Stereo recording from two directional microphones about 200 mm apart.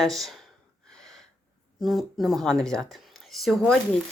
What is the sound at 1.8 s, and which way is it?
Speech, centre (ahead or behind).